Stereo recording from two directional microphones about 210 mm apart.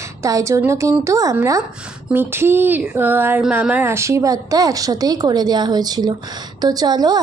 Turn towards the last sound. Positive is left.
turn(degrees=-20)  # may be behind; listen again after turning